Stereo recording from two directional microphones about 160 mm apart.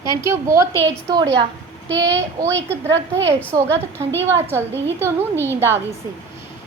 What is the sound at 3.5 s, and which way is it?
A woman's voice, 20° right (ahead or behind).